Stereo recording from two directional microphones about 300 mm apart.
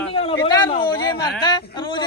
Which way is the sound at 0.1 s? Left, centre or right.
Centre.